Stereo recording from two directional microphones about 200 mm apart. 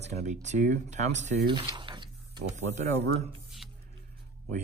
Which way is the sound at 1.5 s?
25° right (ahead or behind).